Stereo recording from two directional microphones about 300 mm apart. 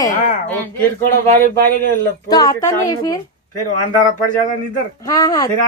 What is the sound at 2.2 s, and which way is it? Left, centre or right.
Speech, centre.